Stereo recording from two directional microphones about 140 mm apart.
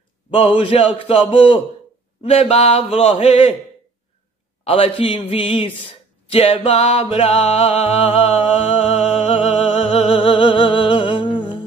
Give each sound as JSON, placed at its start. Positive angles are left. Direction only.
{"t": 0.3, "sound": "a man's voice", "side_deg": 40}
{"t": 4.6, "sound": "a man's voice", "side_deg": 40}
{"t": 6.2, "sound": "music", "side_deg": 40}